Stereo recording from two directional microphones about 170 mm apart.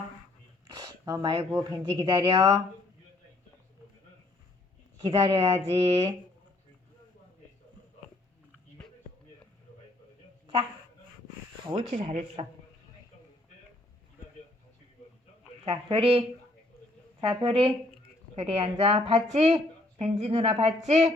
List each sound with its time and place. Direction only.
0.7 s speech: 20° right (ahead or behind)
5.0 s a woman's voice: 30° right (ahead or behind)
11.6 s speech: 30° right (ahead or behind)
11.9 s a woman's voice: 45° right (ahead or behind)
15.6 s a woman's voice: 35° right (ahead or behind)